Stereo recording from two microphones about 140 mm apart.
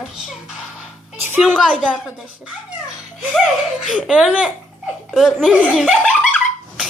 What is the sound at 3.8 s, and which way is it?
A woman's voice, 5° right (ahead or behind).